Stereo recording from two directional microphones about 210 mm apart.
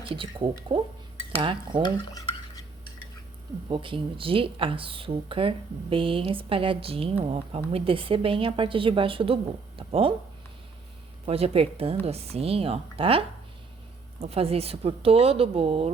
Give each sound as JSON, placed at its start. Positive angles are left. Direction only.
{"t": 0.1, "sound": "speech", "side_deg": -25}
{"t": 1.8, "sound": "stir", "side_deg": 15}
{"t": 3.7, "sound": "speech", "side_deg": -25}
{"t": 11.3, "sound": "speech", "side_deg": -30}